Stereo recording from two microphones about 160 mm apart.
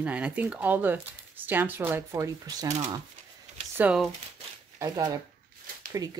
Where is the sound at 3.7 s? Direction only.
10° right (ahead or behind).